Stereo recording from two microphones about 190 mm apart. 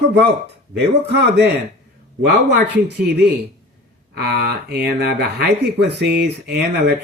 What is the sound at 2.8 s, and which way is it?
Speech, 60° right (ahead or behind).